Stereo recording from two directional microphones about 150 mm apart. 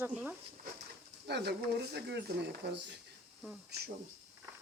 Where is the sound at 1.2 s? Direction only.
90° right.